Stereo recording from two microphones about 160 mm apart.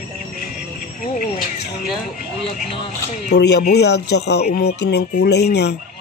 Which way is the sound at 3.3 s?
90° left.